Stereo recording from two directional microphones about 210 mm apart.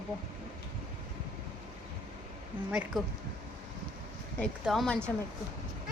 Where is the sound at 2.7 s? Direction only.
5° right (ahead or behind).